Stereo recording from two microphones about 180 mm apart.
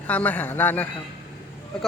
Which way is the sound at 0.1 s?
10° left (ahead or behind).